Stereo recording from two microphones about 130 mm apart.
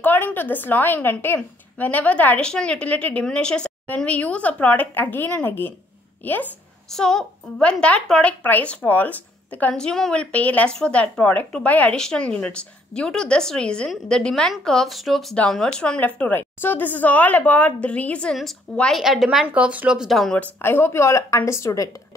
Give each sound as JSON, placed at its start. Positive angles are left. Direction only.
{"t": 0.0, "sound": "a woman's voice", "side_deg": 15}
{"t": 6.9, "sound": "a woman's voice", "side_deg": 5}
{"t": 20.6, "sound": "a woman's voice", "side_deg": 20}